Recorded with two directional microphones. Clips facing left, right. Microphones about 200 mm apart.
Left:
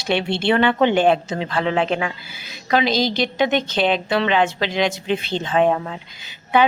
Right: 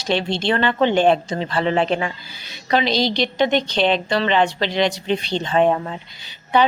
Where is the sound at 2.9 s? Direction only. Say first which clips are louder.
Even; 50° left (ahead or behind).